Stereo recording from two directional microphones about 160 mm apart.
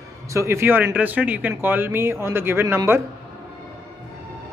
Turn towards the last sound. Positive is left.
turn(degrees=-15)  # may be behind; listen again after turning